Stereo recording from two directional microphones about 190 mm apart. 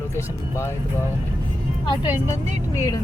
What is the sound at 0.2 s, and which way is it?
Speech, 15° left (ahead or behind).